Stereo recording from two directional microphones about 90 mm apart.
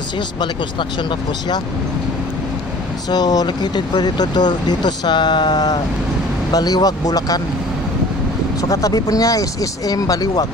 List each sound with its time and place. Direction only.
3.1 s speech: 45° left (ahead or behind)
8.5 s speech: 40° left (ahead or behind)